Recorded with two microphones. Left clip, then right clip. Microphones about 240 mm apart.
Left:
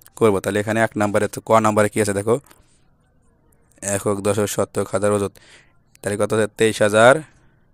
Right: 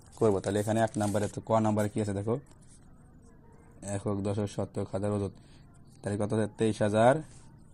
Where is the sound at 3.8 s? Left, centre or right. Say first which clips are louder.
Left 13 dB; left.